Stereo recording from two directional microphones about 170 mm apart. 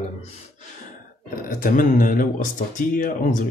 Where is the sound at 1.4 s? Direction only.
55° left (ahead or behind).